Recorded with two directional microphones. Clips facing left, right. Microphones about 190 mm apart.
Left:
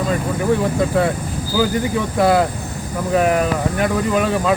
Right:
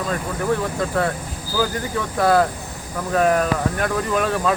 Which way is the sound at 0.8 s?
10° left (ahead or behind).